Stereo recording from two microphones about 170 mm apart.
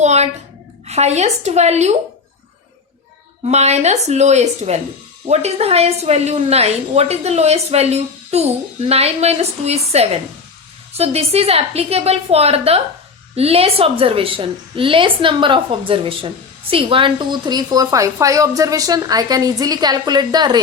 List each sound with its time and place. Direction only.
0.0 s a sound: 40° right (ahead or behind)
0.9 s a woman's voice: 40° right (ahead or behind)
3.4 s a woman's voice: 40° right (ahead or behind); by 20.6 s 25° right (ahead or behind)